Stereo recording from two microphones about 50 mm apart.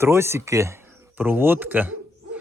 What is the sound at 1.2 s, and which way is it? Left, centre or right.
Speech, right.